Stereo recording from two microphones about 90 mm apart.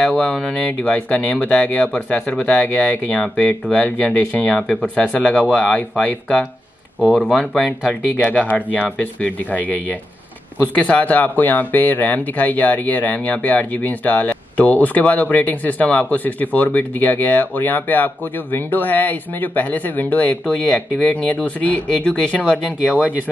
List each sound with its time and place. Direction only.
0.0 s speech: 10° left (ahead or behind)
7.3 s speech: 10° left (ahead or behind)
22.8 s speech: 15° right (ahead or behind)